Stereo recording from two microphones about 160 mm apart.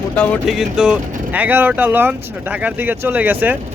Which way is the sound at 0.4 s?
5° right (ahead or behind).